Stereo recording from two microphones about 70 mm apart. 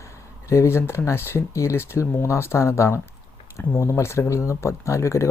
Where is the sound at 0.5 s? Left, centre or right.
Left.